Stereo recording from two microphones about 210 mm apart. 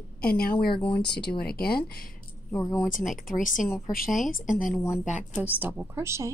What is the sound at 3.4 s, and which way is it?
Speech, 40° left (ahead or behind).